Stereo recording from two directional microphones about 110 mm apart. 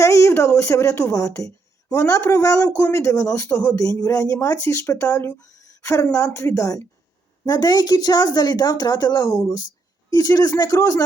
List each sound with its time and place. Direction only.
0.0 s a woman's voice: 30° left (ahead or behind)
3.5 s speech: 15° left (ahead or behind)
3.8 s a woman's voice: 30° left (ahead or behind)